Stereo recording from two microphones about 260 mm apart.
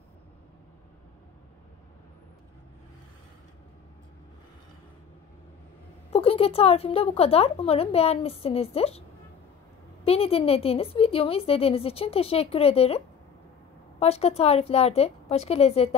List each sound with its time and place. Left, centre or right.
6.1 s a woman's voice: left
10.0 s a woman's voice: left